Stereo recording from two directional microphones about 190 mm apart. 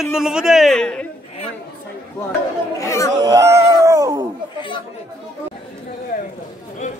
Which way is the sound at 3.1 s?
20° right (ahead or behind).